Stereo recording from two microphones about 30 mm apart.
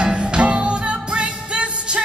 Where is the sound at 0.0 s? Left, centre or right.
Right.